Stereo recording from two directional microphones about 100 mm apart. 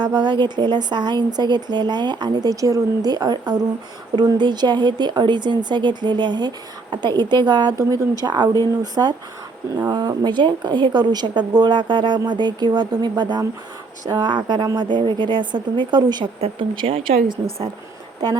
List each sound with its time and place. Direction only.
0.0 s speech: 45° right (ahead or behind)
16.4 s speech: 60° right (ahead or behind)